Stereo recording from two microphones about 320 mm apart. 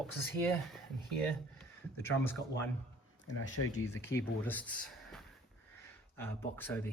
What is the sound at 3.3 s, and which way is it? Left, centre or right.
Speech, left.